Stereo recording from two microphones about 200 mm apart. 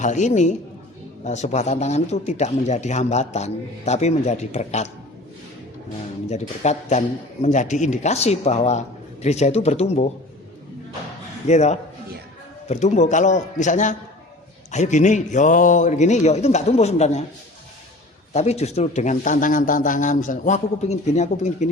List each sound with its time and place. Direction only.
0.0 s speech: 35° left (ahead or behind)
6.2 s speech: 35° left (ahead or behind)
11.4 s speech: 35° left (ahead or behind)
18.3 s speech: 35° left (ahead or behind)